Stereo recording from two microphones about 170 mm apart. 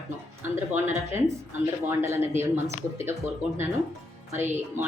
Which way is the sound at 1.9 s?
15° right (ahead or behind).